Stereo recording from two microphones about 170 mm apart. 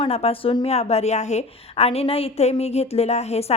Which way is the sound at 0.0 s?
35° left (ahead or behind).